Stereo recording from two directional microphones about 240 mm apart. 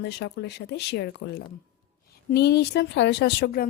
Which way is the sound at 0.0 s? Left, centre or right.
Left.